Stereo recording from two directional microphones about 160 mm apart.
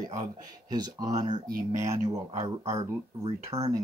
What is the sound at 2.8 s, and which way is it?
Speech, 25° right (ahead or behind).